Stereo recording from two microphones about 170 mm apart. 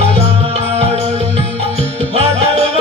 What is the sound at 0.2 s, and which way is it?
Music, 40° right (ahead or behind).